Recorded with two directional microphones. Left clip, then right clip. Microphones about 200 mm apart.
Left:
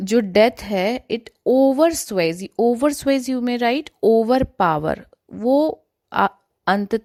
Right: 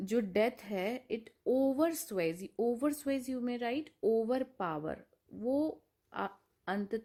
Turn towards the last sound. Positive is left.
turn(degrees=50)  # may be behind; listen again after turning